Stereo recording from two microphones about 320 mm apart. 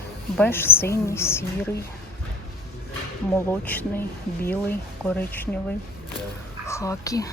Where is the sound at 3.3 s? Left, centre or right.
Centre.